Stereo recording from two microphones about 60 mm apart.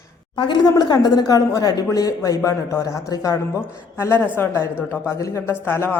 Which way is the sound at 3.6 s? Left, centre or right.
Left.